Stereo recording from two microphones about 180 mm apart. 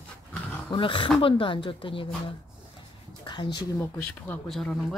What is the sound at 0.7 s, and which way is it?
Speech, 30° left (ahead or behind).